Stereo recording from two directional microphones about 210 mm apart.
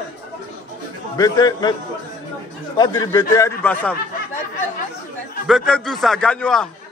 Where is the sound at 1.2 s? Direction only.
20° left (ahead or behind).